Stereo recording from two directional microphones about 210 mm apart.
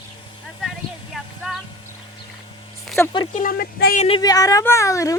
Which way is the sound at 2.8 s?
Centre (ahead or behind).